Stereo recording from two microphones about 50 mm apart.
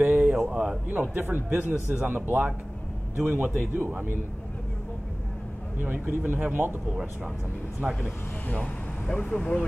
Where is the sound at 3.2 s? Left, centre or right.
Right.